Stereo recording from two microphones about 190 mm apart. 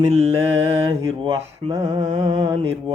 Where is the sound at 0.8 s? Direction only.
25° right (ahead or behind).